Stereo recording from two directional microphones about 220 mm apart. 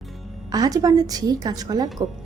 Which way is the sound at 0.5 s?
15° right (ahead or behind).